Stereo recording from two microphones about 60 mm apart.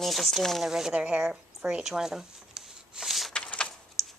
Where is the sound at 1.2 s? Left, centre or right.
Centre.